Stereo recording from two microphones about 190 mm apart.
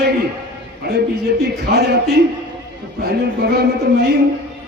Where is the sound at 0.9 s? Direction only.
60° right (ahead or behind).